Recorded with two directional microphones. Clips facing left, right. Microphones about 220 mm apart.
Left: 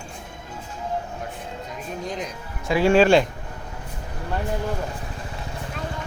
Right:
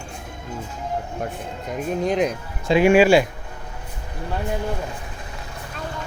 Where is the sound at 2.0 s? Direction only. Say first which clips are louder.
Right 11 dB; 65° right (ahead or behind).